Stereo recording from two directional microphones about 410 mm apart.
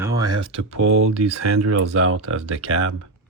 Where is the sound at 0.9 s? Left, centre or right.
Right.